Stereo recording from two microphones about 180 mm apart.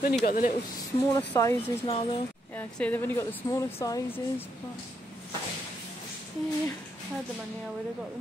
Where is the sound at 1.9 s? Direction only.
30° left (ahead or behind).